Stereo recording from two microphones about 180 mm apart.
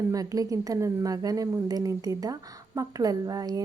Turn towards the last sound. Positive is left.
turn(degrees=-20)  # may be behind; listen again after turning